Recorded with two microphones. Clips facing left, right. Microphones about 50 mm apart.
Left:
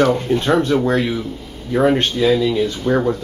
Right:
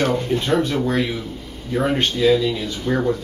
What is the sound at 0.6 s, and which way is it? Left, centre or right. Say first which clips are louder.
Speech: left 4 dB; left.